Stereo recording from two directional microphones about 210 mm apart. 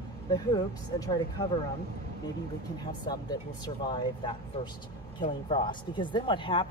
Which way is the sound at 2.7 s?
20° left (ahead or behind).